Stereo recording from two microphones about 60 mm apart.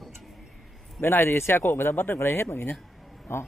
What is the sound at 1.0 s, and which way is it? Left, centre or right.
Speech, left.